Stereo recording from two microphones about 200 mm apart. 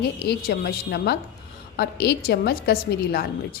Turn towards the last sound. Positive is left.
turn(degrees=50)  # may be behind; listen again after turning